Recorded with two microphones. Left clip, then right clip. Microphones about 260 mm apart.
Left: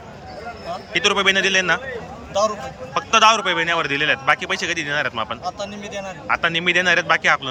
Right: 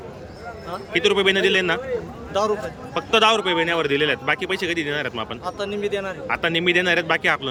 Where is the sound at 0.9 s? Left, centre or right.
Centre.